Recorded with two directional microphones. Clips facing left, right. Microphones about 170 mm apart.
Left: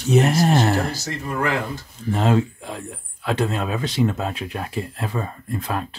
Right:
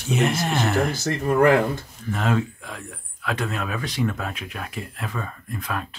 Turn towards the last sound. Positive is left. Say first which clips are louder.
# left 4 dB
turn(degrees=30)  # may be behind; listen again after turning